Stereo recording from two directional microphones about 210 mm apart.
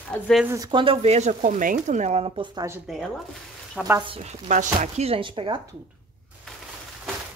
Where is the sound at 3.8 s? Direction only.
20° right (ahead or behind).